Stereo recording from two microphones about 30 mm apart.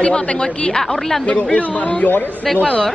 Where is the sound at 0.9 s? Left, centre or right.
Centre.